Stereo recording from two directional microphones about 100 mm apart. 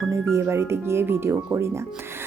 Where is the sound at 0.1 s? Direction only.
30° right (ahead or behind).